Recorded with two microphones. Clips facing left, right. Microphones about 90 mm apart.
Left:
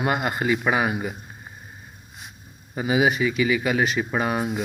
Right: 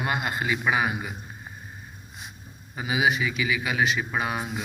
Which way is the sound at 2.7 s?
45° left (ahead or behind).